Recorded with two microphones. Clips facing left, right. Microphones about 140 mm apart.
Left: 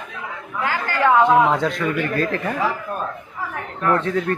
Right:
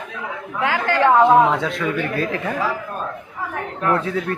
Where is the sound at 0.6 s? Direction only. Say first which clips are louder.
Right 3 dB; 80° right.